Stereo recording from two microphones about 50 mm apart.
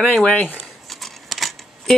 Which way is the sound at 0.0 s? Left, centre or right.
Centre.